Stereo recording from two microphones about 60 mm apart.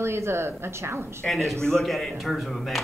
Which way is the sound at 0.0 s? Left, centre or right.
Right.